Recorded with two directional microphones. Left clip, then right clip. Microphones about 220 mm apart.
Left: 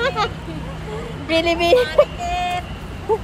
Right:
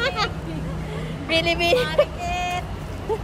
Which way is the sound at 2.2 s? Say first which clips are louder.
Left 3 dB; 15° right (ahead or behind).